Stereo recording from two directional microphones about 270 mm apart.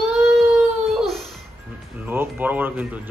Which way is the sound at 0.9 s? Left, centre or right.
Centre.